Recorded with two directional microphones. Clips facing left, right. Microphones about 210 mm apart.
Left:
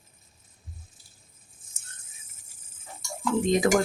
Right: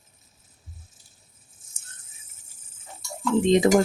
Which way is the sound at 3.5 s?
20° right (ahead or behind).